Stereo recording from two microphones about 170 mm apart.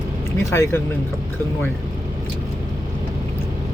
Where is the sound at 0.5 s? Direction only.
15° left (ahead or behind).